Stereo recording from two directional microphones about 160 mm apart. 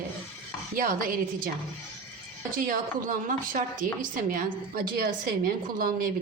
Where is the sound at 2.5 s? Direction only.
60° right (ahead or behind).